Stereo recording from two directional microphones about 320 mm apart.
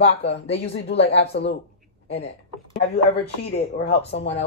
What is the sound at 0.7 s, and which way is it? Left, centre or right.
Speech, left.